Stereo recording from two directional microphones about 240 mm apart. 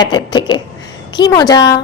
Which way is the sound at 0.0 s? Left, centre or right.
Centre.